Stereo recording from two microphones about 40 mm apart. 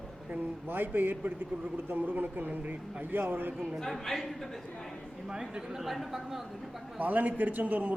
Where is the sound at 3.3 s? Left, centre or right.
Right.